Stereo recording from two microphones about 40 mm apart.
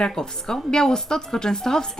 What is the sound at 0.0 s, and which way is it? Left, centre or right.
A woman's voice, centre.